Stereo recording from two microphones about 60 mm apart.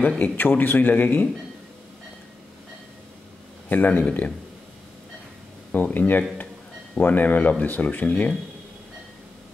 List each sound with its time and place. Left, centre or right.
0.2 s speech: left
3.6 s speech: left
5.7 s speech: left